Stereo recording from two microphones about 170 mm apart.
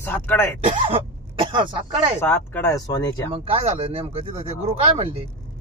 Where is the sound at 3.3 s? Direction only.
35° right (ahead or behind).